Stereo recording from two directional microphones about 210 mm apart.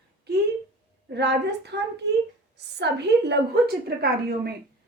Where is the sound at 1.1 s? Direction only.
55° right (ahead or behind).